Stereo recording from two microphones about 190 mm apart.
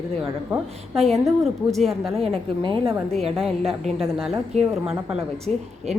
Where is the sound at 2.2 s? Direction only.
25° right (ahead or behind).